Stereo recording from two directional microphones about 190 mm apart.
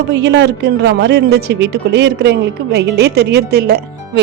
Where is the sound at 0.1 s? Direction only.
65° right (ahead or behind).